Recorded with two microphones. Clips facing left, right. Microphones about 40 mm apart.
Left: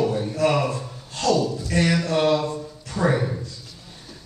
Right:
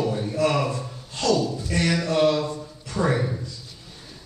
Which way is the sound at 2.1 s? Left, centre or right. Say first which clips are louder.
Even; centre.